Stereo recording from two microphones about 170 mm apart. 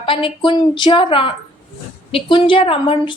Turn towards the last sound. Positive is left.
turn(degrees=30)  # may be behind; listen again after turning